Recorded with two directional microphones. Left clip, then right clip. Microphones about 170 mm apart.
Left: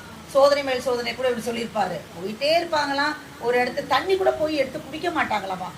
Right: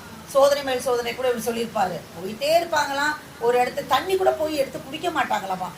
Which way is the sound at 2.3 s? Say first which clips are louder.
Right 1 dB; 20° right (ahead or behind).